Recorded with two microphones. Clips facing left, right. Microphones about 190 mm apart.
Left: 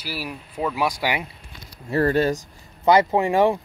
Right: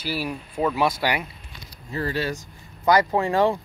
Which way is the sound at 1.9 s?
60° left (ahead or behind).